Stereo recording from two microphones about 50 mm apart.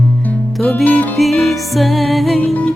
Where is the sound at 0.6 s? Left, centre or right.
Left.